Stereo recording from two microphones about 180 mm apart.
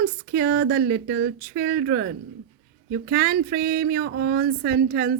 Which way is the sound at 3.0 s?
55° right (ahead or behind).